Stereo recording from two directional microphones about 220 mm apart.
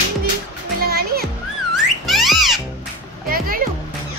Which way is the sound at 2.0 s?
Centre (ahead or behind).